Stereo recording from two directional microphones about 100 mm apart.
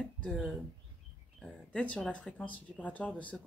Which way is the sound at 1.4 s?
10° left (ahead or behind).